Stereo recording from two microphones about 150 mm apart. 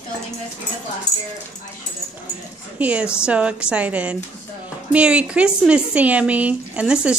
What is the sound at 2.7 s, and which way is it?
A woman's voice, 10° right (ahead or behind).